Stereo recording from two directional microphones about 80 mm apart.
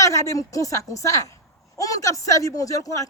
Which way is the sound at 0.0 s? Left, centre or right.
Left.